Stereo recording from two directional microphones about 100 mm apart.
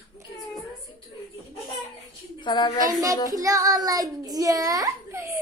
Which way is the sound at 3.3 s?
35° right (ahead or behind).